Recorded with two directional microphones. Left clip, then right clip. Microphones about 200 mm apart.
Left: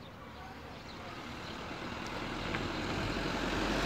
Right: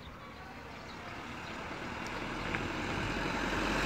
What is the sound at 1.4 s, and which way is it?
Vehicle, 10° right (ahead or behind).